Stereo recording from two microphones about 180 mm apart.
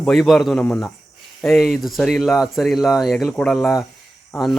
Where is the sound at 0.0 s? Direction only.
Centre (ahead or behind).